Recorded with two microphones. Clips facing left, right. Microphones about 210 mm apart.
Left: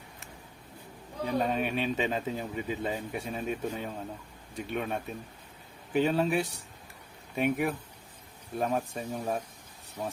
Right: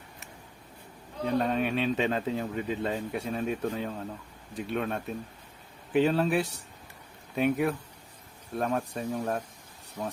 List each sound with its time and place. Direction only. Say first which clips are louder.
1.4 s speech: right 1 dB; centre (ahead or behind)